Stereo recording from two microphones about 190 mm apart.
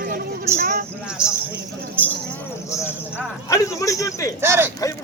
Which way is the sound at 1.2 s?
5° right (ahead or behind).